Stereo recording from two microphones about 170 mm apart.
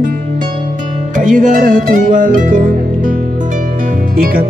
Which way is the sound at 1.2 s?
50° right (ahead or behind).